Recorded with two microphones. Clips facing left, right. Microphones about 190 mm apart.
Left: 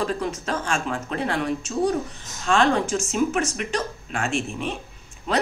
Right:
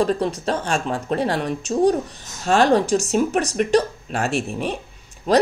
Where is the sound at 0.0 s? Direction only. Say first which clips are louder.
Right 6 dB; 35° right (ahead or behind).